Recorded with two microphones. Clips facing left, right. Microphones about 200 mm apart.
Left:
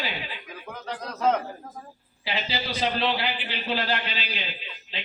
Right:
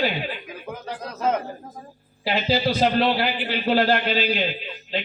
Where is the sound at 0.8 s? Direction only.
5° right (ahead or behind).